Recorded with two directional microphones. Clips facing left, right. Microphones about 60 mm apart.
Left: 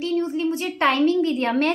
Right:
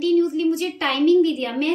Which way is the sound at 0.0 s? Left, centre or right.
Left.